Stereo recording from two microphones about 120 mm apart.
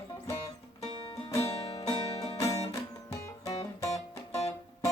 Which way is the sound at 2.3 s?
30° left (ahead or behind).